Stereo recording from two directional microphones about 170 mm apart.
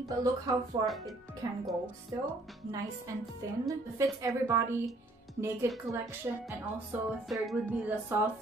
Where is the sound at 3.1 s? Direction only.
20° right (ahead or behind).